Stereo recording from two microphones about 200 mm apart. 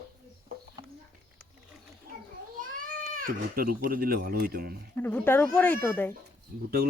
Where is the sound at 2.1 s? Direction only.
45° right (ahead or behind).